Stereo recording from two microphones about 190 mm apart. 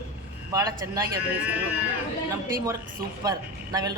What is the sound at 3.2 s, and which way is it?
Speech, 20° right (ahead or behind).